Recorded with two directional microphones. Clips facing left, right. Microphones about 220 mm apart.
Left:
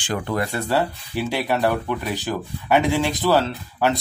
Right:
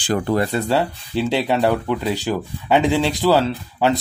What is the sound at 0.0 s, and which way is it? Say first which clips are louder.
Speech: right 5 dB; 35° right (ahead or behind).